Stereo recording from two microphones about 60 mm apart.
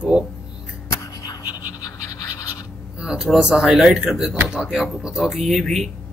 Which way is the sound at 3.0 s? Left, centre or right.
Centre.